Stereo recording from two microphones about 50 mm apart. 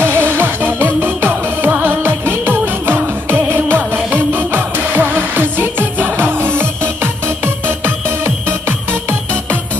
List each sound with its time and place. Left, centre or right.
0.0 s music: right